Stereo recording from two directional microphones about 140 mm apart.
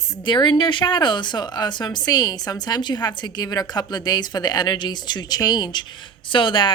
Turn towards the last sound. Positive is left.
turn(degrees=35)  # may be behind; listen again after turning